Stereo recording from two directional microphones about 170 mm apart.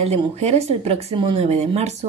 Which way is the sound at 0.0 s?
40° right (ahead or behind).